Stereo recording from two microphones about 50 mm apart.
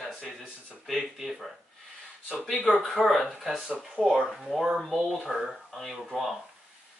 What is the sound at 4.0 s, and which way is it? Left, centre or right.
Speech, right.